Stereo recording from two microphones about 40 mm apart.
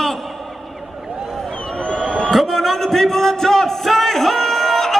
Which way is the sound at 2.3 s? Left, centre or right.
Centre.